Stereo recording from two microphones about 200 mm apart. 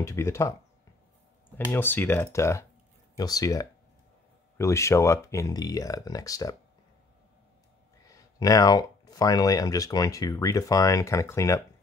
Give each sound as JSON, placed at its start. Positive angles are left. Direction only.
{"t": 0.0, "sound": "speech", "side_deg": 15}
{"t": 1.7, "sound": "speech", "side_deg": 10}
{"t": 8.1, "sound": "speech", "side_deg": 20}